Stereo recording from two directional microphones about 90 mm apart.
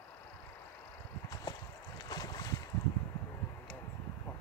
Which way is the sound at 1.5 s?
45° left (ahead or behind).